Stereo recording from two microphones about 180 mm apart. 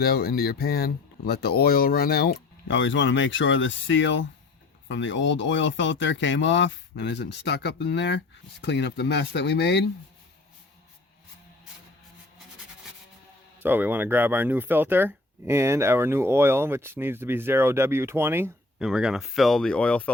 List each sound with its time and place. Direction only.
0.0 s speech: 60° left (ahead or behind)
13.6 s speech: 10° right (ahead or behind); by 20.1 s 5° left (ahead or behind)